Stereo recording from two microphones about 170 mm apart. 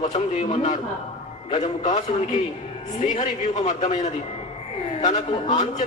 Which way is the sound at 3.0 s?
45° left (ahead or behind).